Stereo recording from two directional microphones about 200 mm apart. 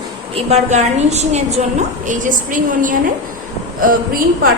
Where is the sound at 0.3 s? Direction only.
35° right (ahead or behind).